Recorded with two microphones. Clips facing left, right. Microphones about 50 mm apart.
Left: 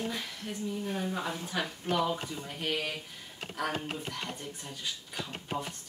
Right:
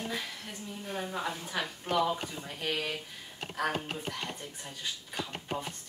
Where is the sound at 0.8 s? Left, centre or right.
Centre.